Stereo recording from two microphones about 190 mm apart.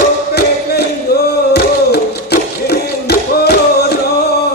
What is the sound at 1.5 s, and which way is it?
Music, 55° left (ahead or behind).